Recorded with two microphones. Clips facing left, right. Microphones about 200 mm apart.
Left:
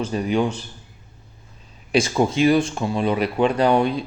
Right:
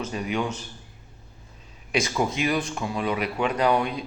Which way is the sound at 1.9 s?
30° left (ahead or behind).